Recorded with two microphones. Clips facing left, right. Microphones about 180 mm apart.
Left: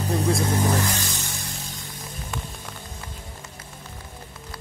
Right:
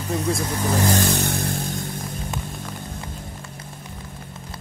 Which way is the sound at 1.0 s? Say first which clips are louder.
Right 11 dB; 60° right (ahead or behind).